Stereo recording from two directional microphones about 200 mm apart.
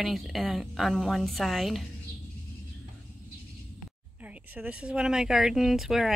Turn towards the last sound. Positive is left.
turn(degrees=0)  # may be behind; listen again after turning